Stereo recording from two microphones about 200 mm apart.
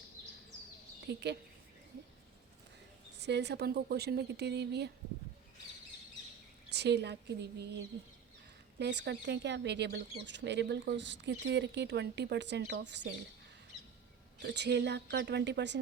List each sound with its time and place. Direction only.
1.0 s speech: 55° right (ahead or behind)
3.2 s speech: 60° right (ahead or behind)
6.7 s speech: 55° right (ahead or behind)
8.8 s speech: 60° right (ahead or behind)
14.3 s speech: 60° right (ahead or behind)